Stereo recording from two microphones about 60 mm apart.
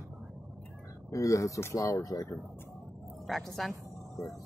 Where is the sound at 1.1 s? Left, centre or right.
Left.